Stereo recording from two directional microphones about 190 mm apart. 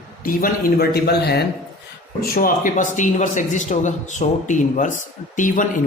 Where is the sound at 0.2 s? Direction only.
50° left (ahead or behind).